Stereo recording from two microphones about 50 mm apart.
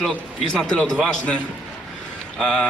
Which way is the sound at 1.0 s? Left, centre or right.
Left.